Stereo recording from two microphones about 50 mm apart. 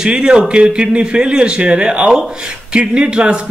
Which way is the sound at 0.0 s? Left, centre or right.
Centre.